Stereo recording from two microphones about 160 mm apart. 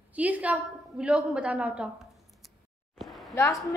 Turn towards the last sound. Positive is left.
turn(degrees=20)  # may be behind; listen again after turning